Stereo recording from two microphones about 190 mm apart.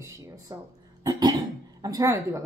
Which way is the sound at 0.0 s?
15° right (ahead or behind).